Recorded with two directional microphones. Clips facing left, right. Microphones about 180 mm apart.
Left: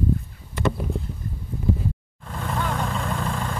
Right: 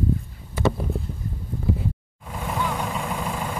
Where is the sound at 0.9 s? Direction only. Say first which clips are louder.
Even; centre (ahead or behind).